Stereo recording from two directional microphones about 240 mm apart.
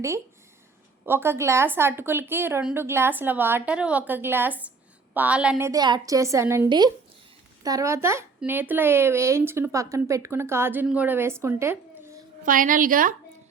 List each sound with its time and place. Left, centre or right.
1.0 s speech: centre
12.4 s a woman's voice: right